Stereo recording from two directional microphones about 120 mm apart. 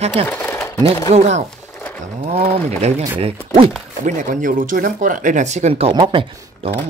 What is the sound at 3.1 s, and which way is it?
Speech, 50° right (ahead or behind).